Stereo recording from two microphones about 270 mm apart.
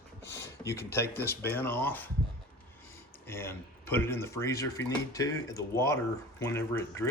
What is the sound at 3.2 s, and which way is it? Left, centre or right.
Speech, centre.